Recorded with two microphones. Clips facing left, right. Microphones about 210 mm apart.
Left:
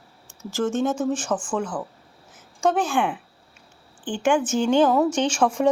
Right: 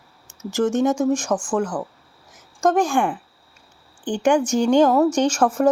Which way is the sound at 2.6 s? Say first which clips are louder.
Right 3 dB; 10° right (ahead or behind).